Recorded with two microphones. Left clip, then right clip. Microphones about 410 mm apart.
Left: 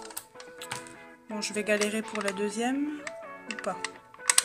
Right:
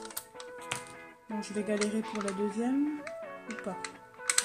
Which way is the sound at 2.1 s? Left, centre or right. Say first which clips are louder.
Left 3 dB; left.